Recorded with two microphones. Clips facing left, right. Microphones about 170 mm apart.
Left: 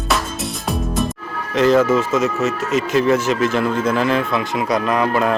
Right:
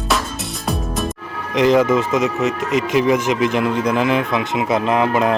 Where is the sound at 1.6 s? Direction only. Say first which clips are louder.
Even; 15° right (ahead or behind).